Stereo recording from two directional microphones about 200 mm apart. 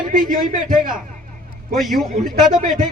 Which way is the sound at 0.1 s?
40° right (ahead or behind).